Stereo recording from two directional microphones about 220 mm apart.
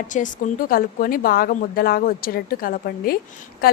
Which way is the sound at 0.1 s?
40° left (ahead or behind).